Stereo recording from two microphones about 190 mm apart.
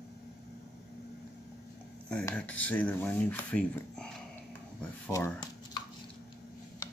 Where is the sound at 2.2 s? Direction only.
5° left (ahead or behind).